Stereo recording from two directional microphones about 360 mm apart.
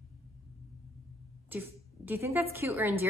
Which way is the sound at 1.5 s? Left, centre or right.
Centre.